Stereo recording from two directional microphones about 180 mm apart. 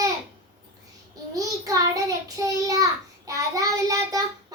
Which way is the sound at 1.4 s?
20° right (ahead or behind).